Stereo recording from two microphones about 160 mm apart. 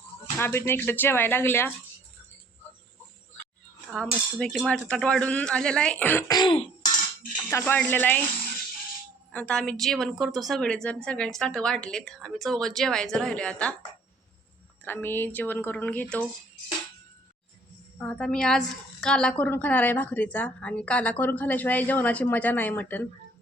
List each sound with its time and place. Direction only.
0.3 s a woman's voice: 15° left (ahead or behind)
3.9 s a woman's voice: 5° left (ahead or behind)
6.2 s throat clearing: 25° left (ahead or behind)
7.5 s a woman's voice: 15° left (ahead or behind)
9.3 s a woman's voice: 5° left (ahead or behind)
14.8 s a woman's voice: 15° left (ahead or behind)
18.0 s a woman's voice: 5° left (ahead or behind)